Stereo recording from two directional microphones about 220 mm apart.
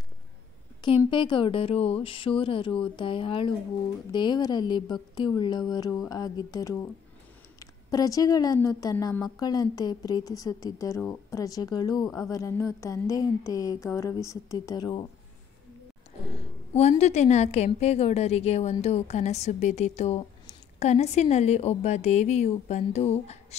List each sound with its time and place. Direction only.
0.8 s a woman's voice: 20° left (ahead or behind)
16.3 s a woman's voice: 30° left (ahead or behind)